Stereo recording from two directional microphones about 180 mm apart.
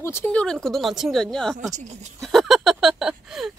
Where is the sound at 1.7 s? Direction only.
40° right (ahead or behind).